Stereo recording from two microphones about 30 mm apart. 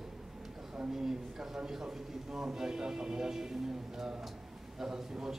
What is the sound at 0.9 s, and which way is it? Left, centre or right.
A man's voice, centre.